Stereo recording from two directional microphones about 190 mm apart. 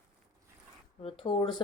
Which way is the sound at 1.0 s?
30° left (ahead or behind).